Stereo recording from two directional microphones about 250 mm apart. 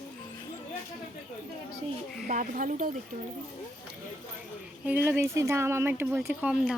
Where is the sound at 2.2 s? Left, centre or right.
Right.